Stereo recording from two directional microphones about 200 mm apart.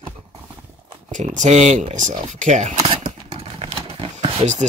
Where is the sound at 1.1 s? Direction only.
40° right (ahead or behind).